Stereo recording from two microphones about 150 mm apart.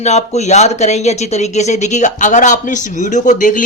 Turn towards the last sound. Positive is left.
turn(degrees=60)  # may be behind; listen again after turning